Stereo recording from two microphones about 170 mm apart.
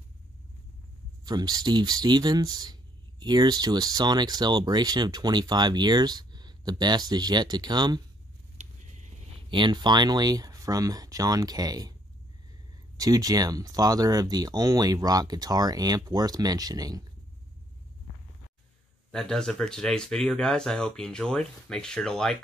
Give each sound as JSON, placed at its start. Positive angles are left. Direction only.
{"t": 1.2, "sound": "speech", "side_deg": -25}
{"t": 9.5, "sound": "speech", "side_deg": -25}
{"t": 12.9, "sound": "speech", "side_deg": -20}
{"t": 19.1, "sound": "speech", "side_deg": 5}